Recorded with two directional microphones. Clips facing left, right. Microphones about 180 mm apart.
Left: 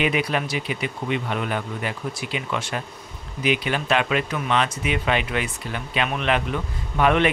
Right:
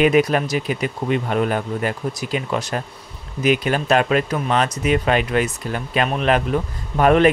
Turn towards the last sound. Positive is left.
turn(degrees=-40)  # may be behind; listen again after turning